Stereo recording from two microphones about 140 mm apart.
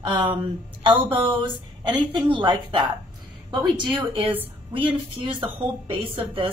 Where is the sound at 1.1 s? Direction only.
35° right (ahead or behind).